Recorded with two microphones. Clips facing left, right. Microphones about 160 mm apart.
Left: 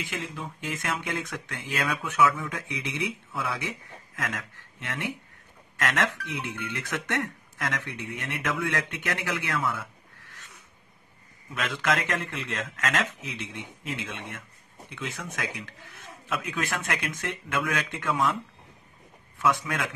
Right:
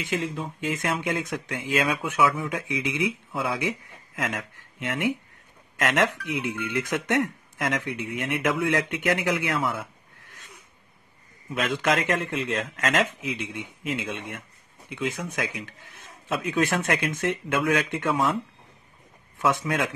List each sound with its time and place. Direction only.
0.0 s speech: 20° right (ahead or behind)
11.5 s speech: 20° right (ahead or behind)
19.4 s speech: 20° right (ahead or behind)